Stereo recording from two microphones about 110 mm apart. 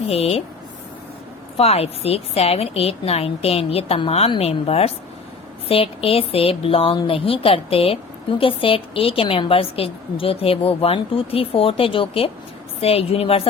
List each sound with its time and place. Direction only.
0.1 s a woman's voice: 65° left (ahead or behind)
1.5 s a woman's voice: 65° left (ahead or behind)